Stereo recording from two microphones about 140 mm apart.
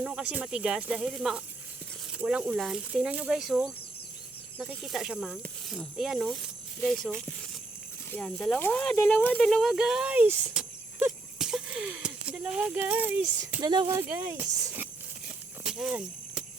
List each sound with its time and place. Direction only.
0.0 s speech: 5° right (ahead or behind)
13.6 s speech: 30° right (ahead or behind)
13.8 s speech: 15° right (ahead or behind)
15.6 s a sound: 5° right (ahead or behind)